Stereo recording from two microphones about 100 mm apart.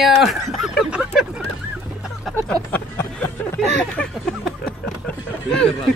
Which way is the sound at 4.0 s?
5° left (ahead or behind).